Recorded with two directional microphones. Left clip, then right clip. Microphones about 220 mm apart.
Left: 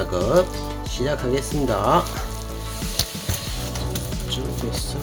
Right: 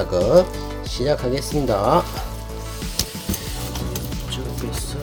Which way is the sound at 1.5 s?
Centre (ahead or behind).